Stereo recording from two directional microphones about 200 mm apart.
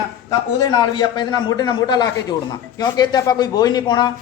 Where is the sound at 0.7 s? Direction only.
20° left (ahead or behind).